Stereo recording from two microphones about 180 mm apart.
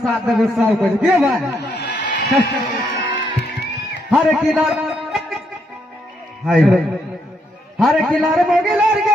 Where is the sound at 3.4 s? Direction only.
65° left (ahead or behind).